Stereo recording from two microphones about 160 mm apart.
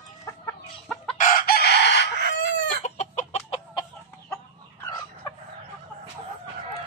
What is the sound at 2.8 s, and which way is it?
Chicken, 45° left (ahead or behind).